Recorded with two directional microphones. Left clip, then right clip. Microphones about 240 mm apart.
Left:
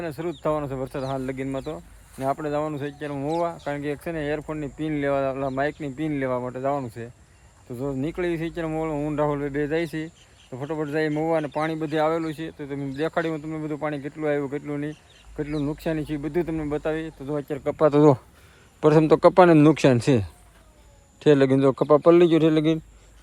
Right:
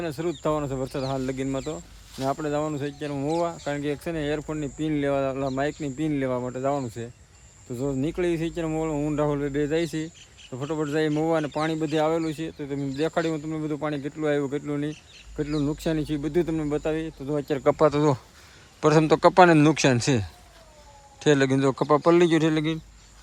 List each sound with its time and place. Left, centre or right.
0.0 s speech: centre
17.5 s speech: right
17.8 s a man's voice: centre